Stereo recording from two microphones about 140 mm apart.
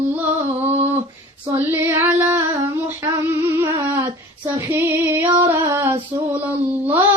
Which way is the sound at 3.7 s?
15° right (ahead or behind).